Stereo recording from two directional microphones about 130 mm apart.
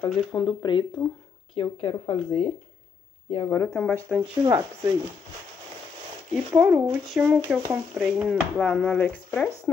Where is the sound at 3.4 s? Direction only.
20° left (ahead or behind).